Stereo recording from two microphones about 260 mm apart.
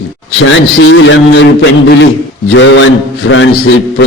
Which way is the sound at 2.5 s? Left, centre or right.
Left.